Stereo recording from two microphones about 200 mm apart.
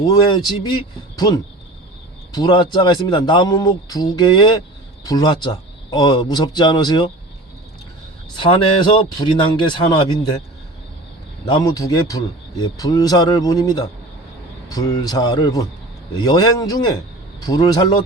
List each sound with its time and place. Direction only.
0.0 s a man's voice: 20° left (ahead or behind)
8.4 s a man's voice: 25° left (ahead or behind)
11.4 s a man's voice: 20° left (ahead or behind)